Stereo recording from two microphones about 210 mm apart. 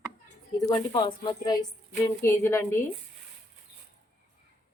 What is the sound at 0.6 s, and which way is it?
A woman's voice, 20° left (ahead or behind).